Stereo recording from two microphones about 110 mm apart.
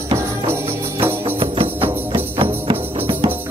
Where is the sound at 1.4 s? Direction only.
55° right (ahead or behind).